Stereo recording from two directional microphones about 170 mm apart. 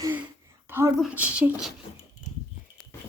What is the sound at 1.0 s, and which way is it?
Speech, 5° right (ahead or behind).